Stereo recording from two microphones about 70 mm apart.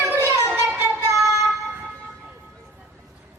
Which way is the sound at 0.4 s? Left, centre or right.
Right.